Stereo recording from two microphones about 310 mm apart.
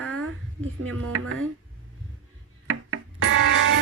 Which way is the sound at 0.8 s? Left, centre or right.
Right.